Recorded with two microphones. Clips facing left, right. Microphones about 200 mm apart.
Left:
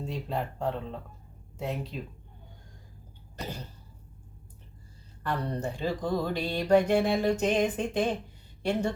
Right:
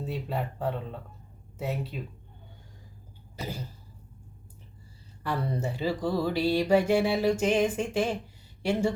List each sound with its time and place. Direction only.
0.0 s speech: 5° right (ahead or behind)
3.3 s cough: 5° right (ahead or behind)
5.2 s music: 5° right (ahead or behind)